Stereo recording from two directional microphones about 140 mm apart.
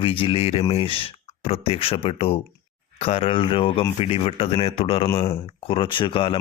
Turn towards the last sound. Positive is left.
turn(degrees=40)  # may be behind; listen again after turning